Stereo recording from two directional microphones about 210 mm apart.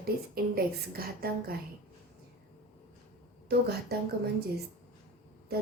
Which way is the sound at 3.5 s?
50° right (ahead or behind).